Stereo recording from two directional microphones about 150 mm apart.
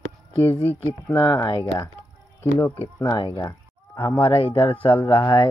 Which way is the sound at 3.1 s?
30° left (ahead or behind).